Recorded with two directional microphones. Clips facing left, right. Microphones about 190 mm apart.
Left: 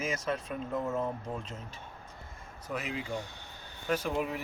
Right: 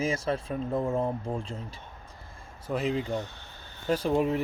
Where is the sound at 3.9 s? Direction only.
30° right (ahead or behind).